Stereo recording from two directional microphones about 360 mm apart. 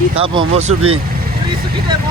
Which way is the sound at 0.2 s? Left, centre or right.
Centre.